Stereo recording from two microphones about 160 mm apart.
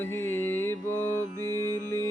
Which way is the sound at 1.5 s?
15° left (ahead or behind).